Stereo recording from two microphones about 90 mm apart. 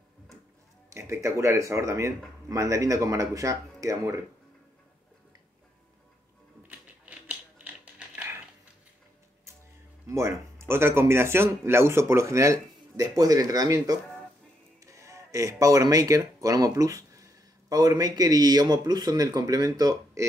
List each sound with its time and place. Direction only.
0.8 s speech: 35° right (ahead or behind)
6.7 s a sound: 15° right (ahead or behind)
10.0 s speech: 30° right (ahead or behind)